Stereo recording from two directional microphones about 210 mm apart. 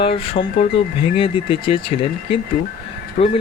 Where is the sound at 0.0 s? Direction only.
25° left (ahead or behind).